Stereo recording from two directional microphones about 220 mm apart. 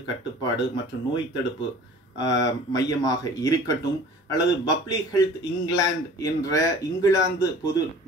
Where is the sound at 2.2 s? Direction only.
15° left (ahead or behind).